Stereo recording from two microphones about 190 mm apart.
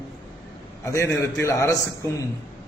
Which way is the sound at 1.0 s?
15° left (ahead or behind).